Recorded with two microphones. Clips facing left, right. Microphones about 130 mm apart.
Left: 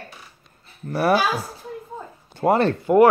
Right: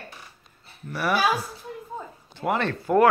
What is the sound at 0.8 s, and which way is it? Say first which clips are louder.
Speech: left 6 dB; 40° left (ahead or behind).